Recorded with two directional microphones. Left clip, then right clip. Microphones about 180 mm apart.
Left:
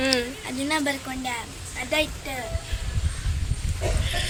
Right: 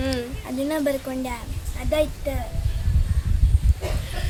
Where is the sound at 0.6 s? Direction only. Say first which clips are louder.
Right 2 dB; 50° right (ahead or behind).